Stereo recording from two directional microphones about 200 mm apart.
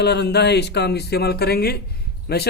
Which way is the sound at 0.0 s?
55° left (ahead or behind).